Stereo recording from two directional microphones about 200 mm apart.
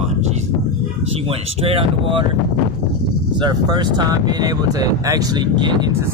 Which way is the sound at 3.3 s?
20° right (ahead or behind).